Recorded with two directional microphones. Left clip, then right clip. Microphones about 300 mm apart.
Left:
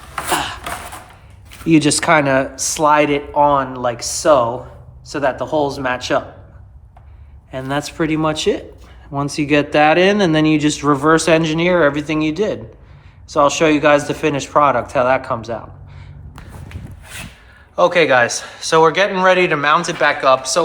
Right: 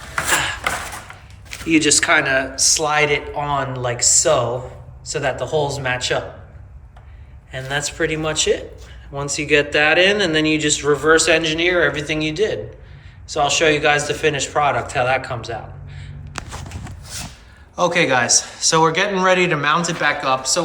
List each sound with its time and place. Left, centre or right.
0.3 s a sound: centre
1.6 s speech: centre
7.5 s a man's voice: centre
17.7 s speech: centre